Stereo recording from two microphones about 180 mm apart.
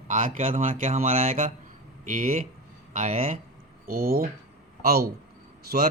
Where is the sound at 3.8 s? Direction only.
55° right (ahead or behind).